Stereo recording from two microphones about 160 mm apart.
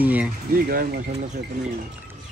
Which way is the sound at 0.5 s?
70° right (ahead or behind).